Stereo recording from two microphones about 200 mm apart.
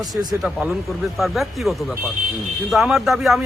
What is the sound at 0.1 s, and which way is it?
Speech, 20° right (ahead or behind).